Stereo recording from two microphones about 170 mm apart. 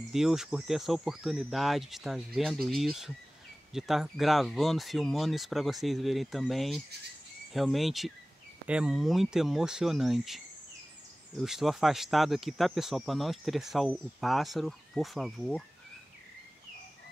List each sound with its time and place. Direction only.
0.1 s speech: centre (ahead or behind)